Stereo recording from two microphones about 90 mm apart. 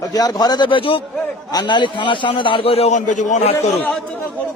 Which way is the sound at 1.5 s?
55° left (ahead or behind).